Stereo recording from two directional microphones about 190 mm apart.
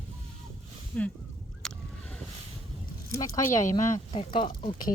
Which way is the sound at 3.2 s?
15° left (ahead or behind).